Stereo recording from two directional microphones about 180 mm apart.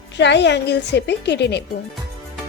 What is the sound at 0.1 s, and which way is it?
A woman's voice, 75° left (ahead or behind).